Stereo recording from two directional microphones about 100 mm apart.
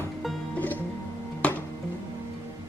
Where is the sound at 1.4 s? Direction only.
10° left (ahead or behind).